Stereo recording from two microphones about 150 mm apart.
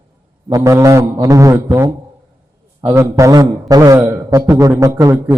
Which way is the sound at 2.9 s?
20° right (ahead or behind).